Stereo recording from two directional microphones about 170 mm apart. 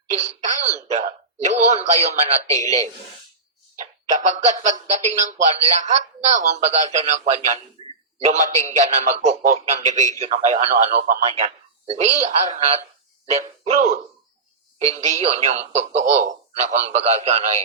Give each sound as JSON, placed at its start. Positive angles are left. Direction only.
{"t": 0.1, "sound": "throat clearing", "side_deg": -40}
{"t": 0.9, "sound": "a sound", "side_deg": -40}
{"t": 4.1, "sound": "speech", "side_deg": -45}
{"t": 10.7, "sound": "speech", "side_deg": -50}
{"t": 15.0, "sound": "speech", "side_deg": -40}